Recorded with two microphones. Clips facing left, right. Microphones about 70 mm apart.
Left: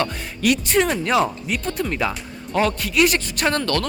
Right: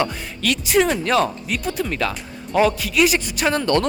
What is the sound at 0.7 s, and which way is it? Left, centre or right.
Speech, centre.